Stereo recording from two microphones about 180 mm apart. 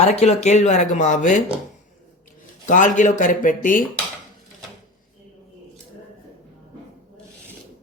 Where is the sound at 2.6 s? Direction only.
45° left (ahead or behind).